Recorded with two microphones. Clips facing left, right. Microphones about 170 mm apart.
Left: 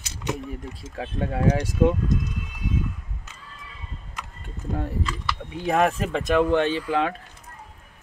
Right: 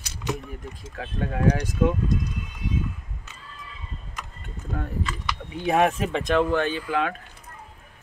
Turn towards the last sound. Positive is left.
turn(degrees=25)  # may be behind; listen again after turning